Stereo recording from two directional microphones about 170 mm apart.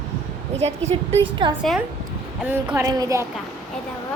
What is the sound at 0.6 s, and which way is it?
Speech, 40° right (ahead or behind).